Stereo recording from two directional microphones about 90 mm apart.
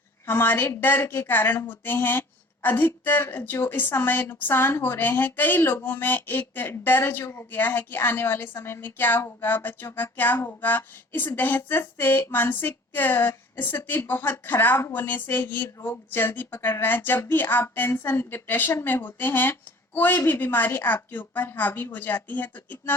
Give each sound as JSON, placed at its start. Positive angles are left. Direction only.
{"t": 0.3, "sound": "speech", "side_deg": 25}